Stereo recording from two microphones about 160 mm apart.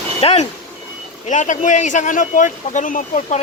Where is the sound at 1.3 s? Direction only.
50° left (ahead or behind).